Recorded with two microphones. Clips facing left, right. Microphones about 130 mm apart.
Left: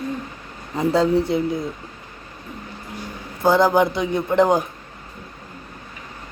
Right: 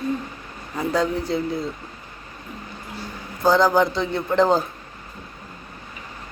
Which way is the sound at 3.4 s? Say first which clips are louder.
Left 1 dB; 25° left (ahead or behind).